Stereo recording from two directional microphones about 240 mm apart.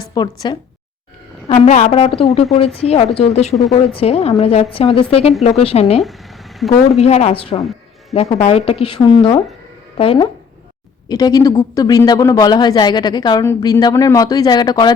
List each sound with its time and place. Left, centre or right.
0.1 s speech: centre
1.5 s a woman's voice: left